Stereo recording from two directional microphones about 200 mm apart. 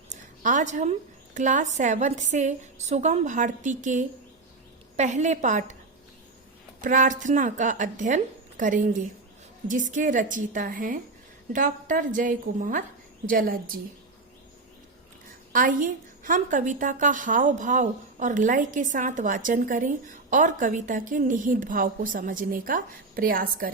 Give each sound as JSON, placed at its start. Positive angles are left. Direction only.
{"t": 0.1, "sound": "a woman's voice", "side_deg": -40}
{"t": 6.8, "sound": "a woman's voice", "side_deg": -40}
{"t": 15.5, "sound": "a woman's voice", "side_deg": -40}